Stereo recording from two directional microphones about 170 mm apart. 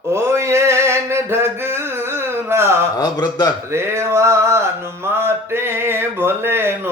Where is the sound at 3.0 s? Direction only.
25° left (ahead or behind).